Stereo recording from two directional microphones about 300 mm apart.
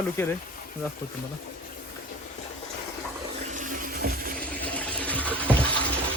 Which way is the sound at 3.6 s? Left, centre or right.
Right.